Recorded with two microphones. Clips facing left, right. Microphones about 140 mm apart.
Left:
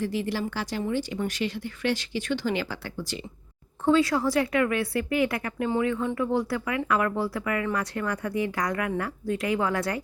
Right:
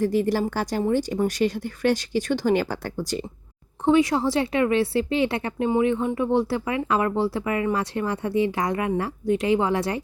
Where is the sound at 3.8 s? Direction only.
20° right (ahead or behind).